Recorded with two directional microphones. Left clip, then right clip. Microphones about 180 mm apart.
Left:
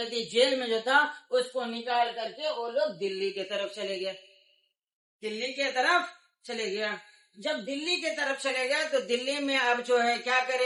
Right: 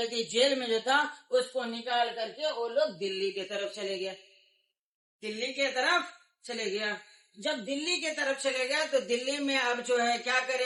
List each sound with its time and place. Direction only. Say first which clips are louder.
0.1 s a man's voice: left 4 dB; centre (ahead or behind)
3.3 s speech: left 2 dB; 20° left (ahead or behind)
5.2 s speech: even; 15° left (ahead or behind)
7.4 s speech: left 1 dB; centre (ahead or behind)
9.9 s a man's voice: left 1 dB; centre (ahead or behind)